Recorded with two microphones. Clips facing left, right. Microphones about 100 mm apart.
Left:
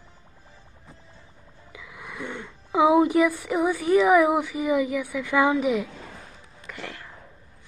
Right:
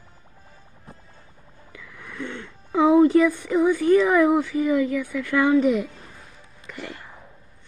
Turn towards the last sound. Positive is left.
turn(degrees=-15)  # may be behind; listen again after turning